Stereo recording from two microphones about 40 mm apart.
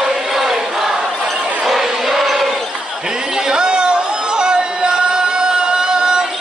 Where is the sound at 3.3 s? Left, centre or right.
Centre.